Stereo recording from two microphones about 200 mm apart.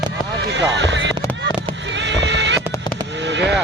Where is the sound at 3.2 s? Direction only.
60° right (ahead or behind).